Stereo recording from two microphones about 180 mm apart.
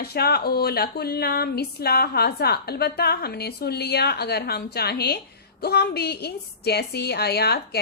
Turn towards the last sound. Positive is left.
turn(degrees=60)  # may be behind; listen again after turning